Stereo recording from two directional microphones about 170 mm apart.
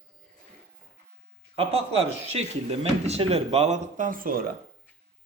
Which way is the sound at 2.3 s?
40° right (ahead or behind).